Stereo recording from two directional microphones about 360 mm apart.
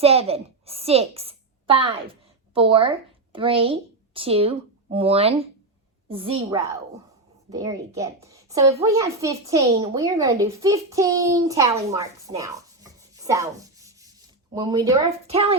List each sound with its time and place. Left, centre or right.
0.0 s a woman's voice: centre